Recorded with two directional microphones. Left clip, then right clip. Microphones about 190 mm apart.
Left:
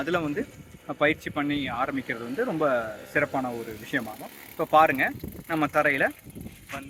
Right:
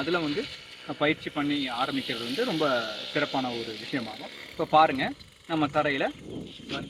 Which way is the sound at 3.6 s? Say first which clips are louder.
Left 2 dB; 90° left.